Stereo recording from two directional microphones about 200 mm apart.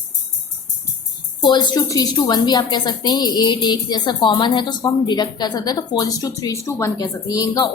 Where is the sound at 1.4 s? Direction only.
20° left (ahead or behind).